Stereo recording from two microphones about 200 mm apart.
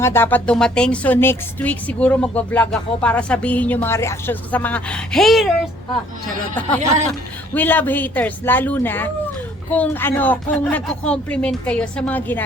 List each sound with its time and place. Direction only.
0.0 s speech: 10° left (ahead or behind)
6.7 s speech: 35° right (ahead or behind)
7.1 s speech: 10° left (ahead or behind)